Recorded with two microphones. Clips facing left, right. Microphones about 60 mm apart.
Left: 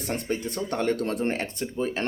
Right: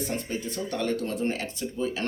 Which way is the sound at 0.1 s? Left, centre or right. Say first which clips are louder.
Left 3 dB; left.